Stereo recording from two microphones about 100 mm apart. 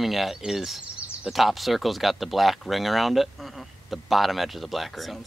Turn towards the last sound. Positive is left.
turn(degrees=0)  # may be behind; listen again after turning